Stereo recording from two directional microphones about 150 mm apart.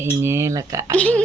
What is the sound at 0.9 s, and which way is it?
Speech, 10° left (ahead or behind).